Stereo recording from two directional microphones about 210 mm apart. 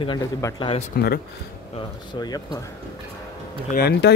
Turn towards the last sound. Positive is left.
turn(degrees=50)  # may be behind; listen again after turning